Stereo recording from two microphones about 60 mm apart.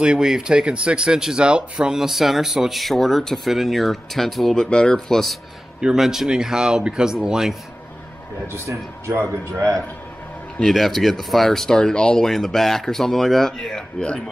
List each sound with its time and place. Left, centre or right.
0.0 s speech: centre
4.6 s speech: centre
5.9 s speech: centre
9.5 s a man's voice: right
10.6 s speech: centre